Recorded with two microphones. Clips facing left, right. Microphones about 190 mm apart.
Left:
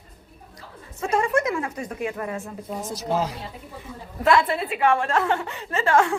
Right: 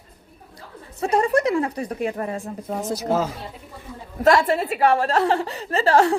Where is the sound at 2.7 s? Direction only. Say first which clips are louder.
Right 5 dB; 65° right (ahead or behind).